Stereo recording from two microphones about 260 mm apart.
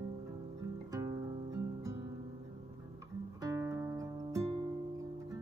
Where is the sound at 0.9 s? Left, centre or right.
Centre.